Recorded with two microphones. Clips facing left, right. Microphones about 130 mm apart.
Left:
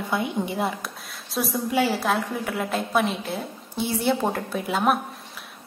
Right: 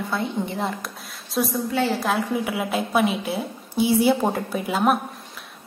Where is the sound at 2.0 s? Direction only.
5° right (ahead or behind).